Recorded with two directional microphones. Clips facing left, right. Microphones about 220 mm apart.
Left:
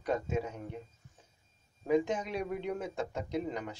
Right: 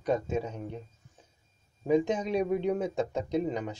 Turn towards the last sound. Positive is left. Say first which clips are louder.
# right 5 dB
turn(degrees=-20)  # may be behind; listen again after turning